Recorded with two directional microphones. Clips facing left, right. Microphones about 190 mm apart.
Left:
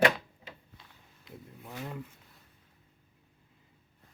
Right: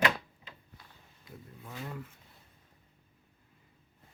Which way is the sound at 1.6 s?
15° left (ahead or behind).